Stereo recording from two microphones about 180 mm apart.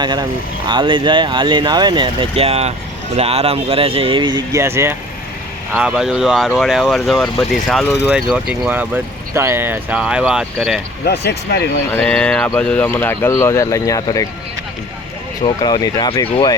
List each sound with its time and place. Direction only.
0.0 s speech: 25° right (ahead or behind); by 10.8 s centre (ahead or behind)
11.0 s speech: 65° left (ahead or behind)
11.9 s speech: 5° left (ahead or behind)
15.4 s speech: 25° left (ahead or behind)